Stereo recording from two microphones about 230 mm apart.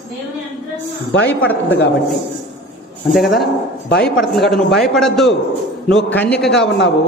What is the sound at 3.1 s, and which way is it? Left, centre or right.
A man's voice, centre.